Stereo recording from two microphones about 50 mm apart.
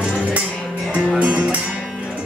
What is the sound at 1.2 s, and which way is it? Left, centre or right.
Music, right.